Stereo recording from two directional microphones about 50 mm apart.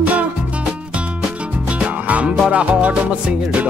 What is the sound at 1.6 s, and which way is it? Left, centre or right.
Music, right.